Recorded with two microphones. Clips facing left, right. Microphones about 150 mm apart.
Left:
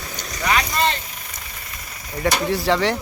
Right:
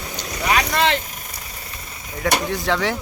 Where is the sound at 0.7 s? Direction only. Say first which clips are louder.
Right 2 dB; 90° right.